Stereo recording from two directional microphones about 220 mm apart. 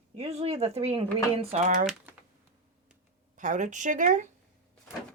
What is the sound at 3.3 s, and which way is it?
Speech, 35° right (ahead or behind).